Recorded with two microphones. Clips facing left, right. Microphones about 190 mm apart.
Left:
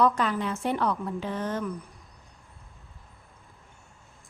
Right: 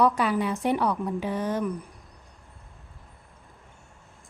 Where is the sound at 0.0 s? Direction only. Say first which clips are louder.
Right 2 dB; 10° right (ahead or behind).